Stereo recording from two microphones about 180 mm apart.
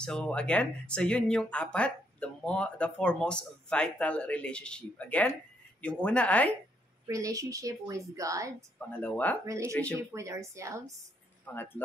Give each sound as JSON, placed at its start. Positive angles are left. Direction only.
{"t": 0.0, "sound": "speech", "side_deg": 5}
{"t": 7.1, "sound": "a woman's voice", "side_deg": -20}
{"t": 8.9, "sound": "speech", "side_deg": 10}
{"t": 9.9, "sound": "a woman's voice", "side_deg": -15}
{"t": 11.4, "sound": "speech", "side_deg": 10}